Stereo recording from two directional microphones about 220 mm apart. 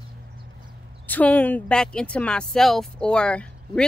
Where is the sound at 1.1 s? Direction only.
5° left (ahead or behind).